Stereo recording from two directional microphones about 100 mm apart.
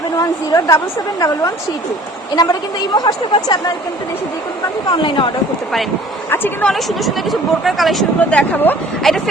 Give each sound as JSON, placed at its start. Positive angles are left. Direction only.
{"t": 0.2, "sound": "a woman's voice", "side_deg": 35}
{"t": 5.0, "sound": "speech", "side_deg": 55}
{"t": 6.3, "sound": "speech", "side_deg": 20}
{"t": 6.7, "sound": "speech", "side_deg": 0}
{"t": 8.2, "sound": "speech", "side_deg": 15}
{"t": 9.0, "sound": "speech", "side_deg": 5}